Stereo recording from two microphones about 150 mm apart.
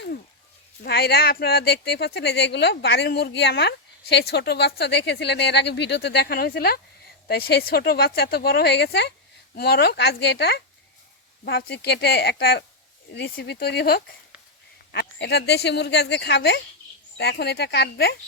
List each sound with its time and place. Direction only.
0.9 s speech: 90° left